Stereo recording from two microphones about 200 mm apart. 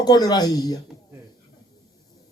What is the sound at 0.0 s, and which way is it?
Speech, 20° left (ahead or behind).